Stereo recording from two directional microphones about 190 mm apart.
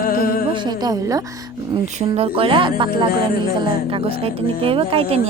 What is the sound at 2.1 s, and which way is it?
Speech, 30° right (ahead or behind).